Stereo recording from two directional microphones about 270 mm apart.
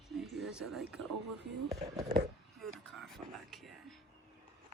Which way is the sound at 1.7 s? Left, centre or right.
Centre.